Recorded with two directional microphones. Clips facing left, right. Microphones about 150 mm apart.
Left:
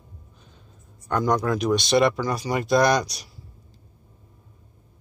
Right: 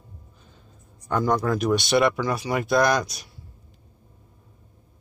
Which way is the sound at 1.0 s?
5° right (ahead or behind).